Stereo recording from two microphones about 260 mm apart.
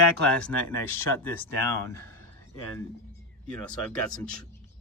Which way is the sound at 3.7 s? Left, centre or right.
Centre.